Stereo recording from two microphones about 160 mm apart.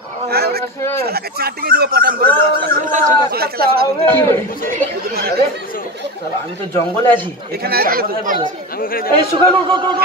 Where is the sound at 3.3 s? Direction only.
75° right (ahead or behind).